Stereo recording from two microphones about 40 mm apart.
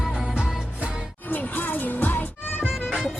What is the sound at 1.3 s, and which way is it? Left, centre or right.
Music, left.